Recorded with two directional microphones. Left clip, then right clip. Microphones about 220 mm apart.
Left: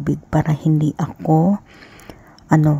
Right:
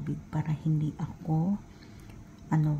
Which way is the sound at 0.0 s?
40° left (ahead or behind).